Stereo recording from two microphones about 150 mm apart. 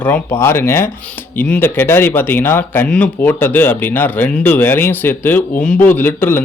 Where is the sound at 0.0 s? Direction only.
15° left (ahead or behind).